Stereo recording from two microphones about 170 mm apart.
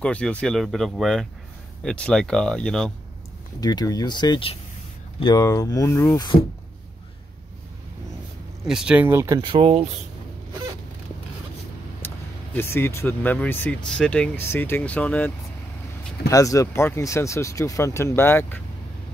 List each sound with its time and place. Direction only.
0.0 s speech: 5° left (ahead or behind)
3.6 s speech: 20° left (ahead or behind)
8.6 s speech: 5° right (ahead or behind)
9.4 s speech: 30° right (ahead or behind)
12.5 s speech: 15° left (ahead or behind)
16.3 s speech: 20° left (ahead or behind)